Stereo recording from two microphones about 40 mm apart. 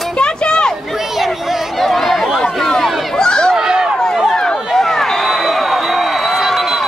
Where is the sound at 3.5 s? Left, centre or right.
Centre.